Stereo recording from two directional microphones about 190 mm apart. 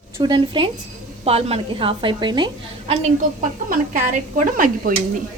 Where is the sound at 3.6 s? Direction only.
40° right (ahead or behind).